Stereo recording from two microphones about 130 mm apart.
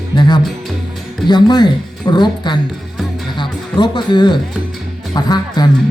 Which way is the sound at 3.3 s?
35° left (ahead or behind).